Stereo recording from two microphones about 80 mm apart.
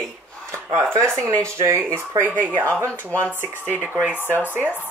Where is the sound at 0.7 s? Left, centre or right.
Right.